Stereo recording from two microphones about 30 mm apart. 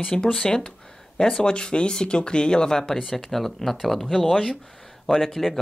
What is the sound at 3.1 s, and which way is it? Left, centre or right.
Speech, centre.